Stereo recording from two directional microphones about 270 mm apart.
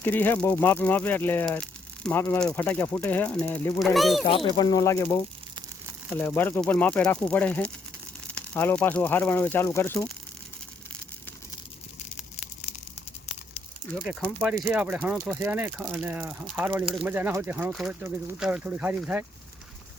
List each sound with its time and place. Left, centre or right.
0.0 s speech: centre
4.3 s speech: centre
13.9 s speech: centre